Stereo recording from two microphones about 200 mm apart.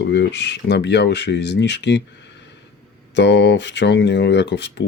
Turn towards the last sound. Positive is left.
turn(degrees=60)  # may be behind; listen again after turning